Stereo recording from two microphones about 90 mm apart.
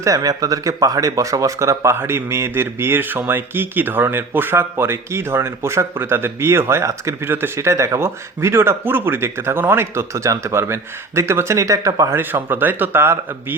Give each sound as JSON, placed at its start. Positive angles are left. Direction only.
{"t": 0.0, "sound": "speech", "side_deg": -40}
{"t": 12.3, "sound": "speech", "side_deg": -20}